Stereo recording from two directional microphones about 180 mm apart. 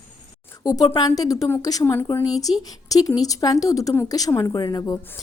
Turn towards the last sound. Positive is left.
turn(degrees=20)  # may be behind; listen again after turning